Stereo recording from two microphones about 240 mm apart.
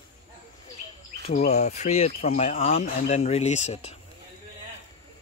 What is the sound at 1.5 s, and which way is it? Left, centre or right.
Speech, left.